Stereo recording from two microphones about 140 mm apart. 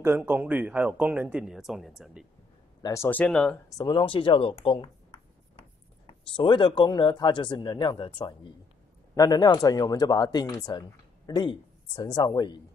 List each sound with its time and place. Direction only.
0.0 s speech: 15° right (ahead or behind)
2.8 s speech: 20° left (ahead or behind)
3.7 s speech: 30° left (ahead or behind)
6.0 s speech: 35° left (ahead or behind)